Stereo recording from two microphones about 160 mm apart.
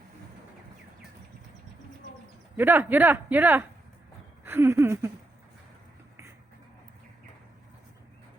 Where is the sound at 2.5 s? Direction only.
15° right (ahead or behind).